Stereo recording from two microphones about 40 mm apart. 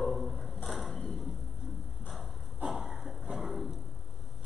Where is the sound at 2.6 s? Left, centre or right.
Centre.